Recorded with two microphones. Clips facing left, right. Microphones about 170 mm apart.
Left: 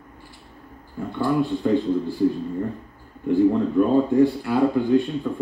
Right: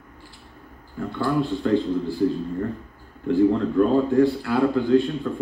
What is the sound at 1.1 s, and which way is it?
Speech, 15° left (ahead or behind).